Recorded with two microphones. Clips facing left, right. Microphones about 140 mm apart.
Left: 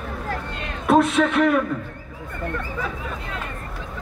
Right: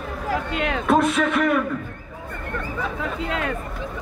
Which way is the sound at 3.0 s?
90° right.